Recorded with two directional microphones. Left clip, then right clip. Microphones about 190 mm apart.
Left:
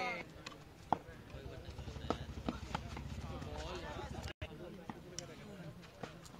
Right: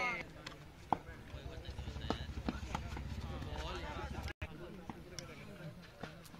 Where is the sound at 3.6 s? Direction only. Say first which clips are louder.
Right 2 dB; 50° left (ahead or behind).